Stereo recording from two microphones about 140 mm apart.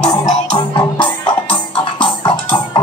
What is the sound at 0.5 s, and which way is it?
Music, 35° left (ahead or behind).